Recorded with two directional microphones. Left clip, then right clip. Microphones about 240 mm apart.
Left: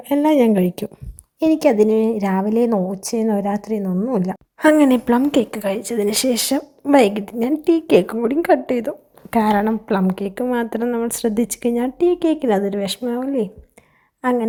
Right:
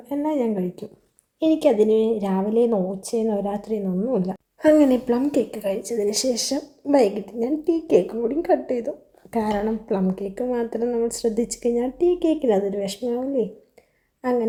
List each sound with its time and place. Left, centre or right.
0.0 s a woman's voice: left